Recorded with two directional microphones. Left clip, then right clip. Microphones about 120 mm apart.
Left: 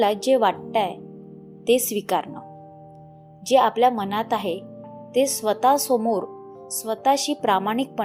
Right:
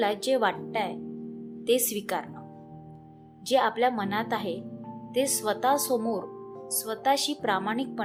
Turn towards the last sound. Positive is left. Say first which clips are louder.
# left 7 dB
turn(degrees=40)  # may be behind; listen again after turning